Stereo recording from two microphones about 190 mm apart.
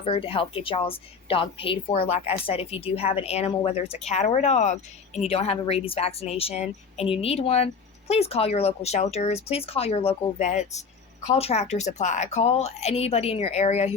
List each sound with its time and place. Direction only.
0.0 s a woman's voice: 30° left (ahead or behind)